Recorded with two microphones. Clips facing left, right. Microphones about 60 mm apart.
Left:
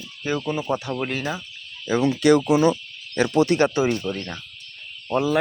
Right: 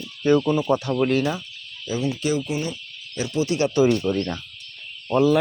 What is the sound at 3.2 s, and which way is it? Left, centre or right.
Speech, left.